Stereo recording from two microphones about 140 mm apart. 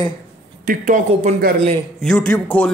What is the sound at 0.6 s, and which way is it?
Speech, 70° right (ahead or behind).